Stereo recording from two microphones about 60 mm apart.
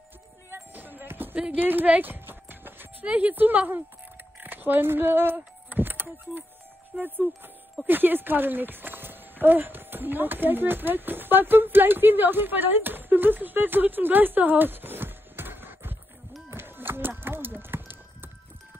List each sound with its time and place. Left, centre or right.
0.5 s basketball bounce: right
1.6 s clip-clop: right
3.1 s a woman's voice: right
16.4 s music: right